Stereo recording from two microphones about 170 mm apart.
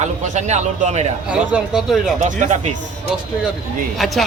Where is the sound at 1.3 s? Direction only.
5° right (ahead or behind).